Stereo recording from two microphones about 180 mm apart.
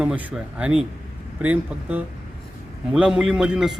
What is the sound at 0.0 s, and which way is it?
A man's voice, 10° right (ahead or behind).